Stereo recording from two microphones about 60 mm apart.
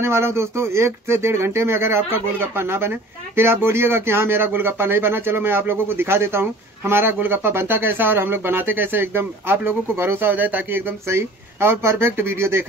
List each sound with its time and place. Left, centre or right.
0.0 s speech: right